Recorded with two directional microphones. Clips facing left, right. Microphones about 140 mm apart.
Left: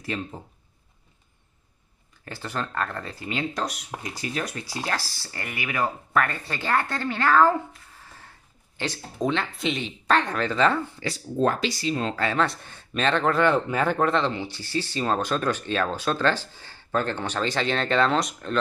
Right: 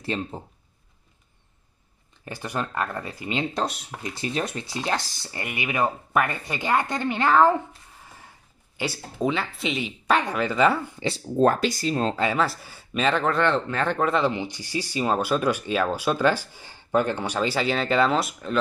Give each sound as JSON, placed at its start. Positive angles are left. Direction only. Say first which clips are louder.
{"t": 0.0, "sound": "speech", "louder": "right 2 dB", "side_deg": -30}
{"t": 2.2, "sound": "speech", "louder": "right 2 dB", "side_deg": -15}
{"t": 8.0, "sound": "a sound", "louder": "right 2 dB", "side_deg": -15}
{"t": 8.7, "sound": "speech", "louder": "right 1 dB", "side_deg": -10}
{"t": 11.3, "sound": "speech", "louder": "right 3 dB", "side_deg": -45}
{"t": 12.2, "sound": "speech", "louder": "right 1 dB", "side_deg": -10}